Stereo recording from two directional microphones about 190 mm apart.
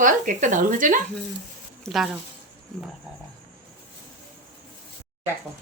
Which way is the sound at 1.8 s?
Centre (ahead or behind).